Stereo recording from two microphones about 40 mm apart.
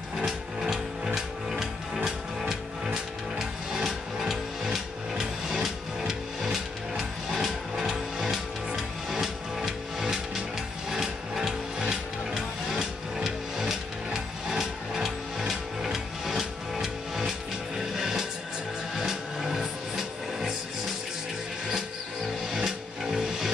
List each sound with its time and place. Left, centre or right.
0.2 s ratchet: centre
2.0 s music: centre
10.9 s a sound: centre
11.8 s music: centre
22.5 s music: centre